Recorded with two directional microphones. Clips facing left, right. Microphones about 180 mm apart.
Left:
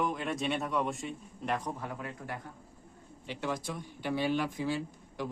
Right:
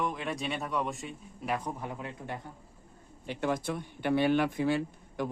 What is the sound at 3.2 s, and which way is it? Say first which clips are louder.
Speech: right 4 dB; 50° right (ahead or behind).